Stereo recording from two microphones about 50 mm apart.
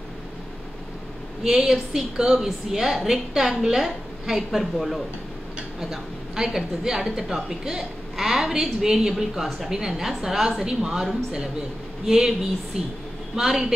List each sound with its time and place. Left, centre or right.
1.4 s a woman's voice: centre
12.1 s a woman's voice: centre